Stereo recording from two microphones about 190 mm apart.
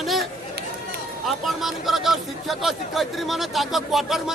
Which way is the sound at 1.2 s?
Centre (ahead or behind).